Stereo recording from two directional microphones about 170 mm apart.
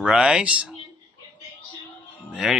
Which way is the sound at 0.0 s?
5° right (ahead or behind).